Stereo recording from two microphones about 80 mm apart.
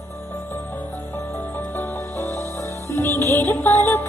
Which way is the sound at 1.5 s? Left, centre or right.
Left.